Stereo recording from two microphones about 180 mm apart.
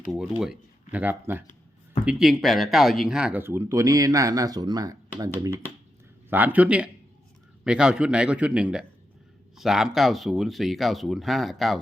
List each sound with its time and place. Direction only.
0.1 s speech: 5° right (ahead or behind)